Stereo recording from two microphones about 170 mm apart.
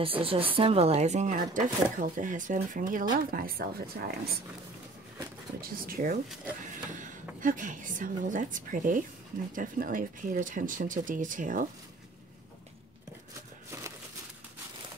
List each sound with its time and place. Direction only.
0.0 s speech: 35° right (ahead or behind); by 4.1 s 60° right (ahead or behind)
5.6 s speech: 55° right (ahead or behind)